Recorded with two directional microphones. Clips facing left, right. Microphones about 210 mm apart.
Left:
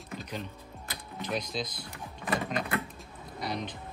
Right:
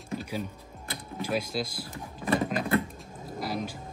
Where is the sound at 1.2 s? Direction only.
5° right (ahead or behind).